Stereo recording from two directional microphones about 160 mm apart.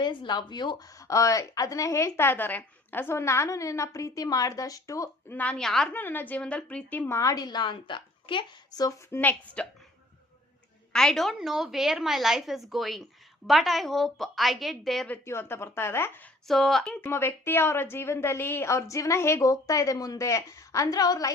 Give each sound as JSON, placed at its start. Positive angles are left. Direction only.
{"t": 0.0, "sound": "a woman's voice", "side_deg": 30}
{"t": 10.9, "sound": "a woman's voice", "side_deg": 5}
{"t": 16.5, "sound": "a woman's voice", "side_deg": 0}